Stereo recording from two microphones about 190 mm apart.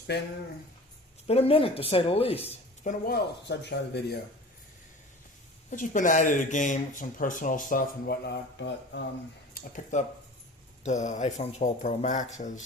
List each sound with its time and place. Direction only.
0.1 s speech: 60° left (ahead or behind)
1.3 s speech: 30° left (ahead or behind)
3.1 s speech: 65° left (ahead or behind)
5.7 s speech: 45° left (ahead or behind); by 9.0 s 70° left (ahead or behind)
9.6 s speech: 45° left (ahead or behind)